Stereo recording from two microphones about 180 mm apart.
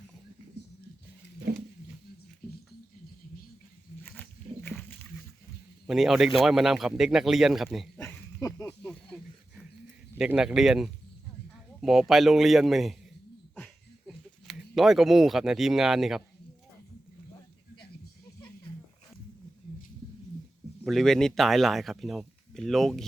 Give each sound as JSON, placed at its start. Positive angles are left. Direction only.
{"t": 4.0, "sound": "wild animals", "side_deg": 10}
{"t": 5.8, "sound": "speech", "side_deg": 0}
{"t": 7.9, "sound": "a sound", "side_deg": 15}
{"t": 8.6, "sound": "snake", "side_deg": 5}
{"t": 10.2, "sound": "speech", "side_deg": -5}
{"t": 14.1, "sound": "speech", "side_deg": 0}
{"t": 20.8, "sound": "speech", "side_deg": 0}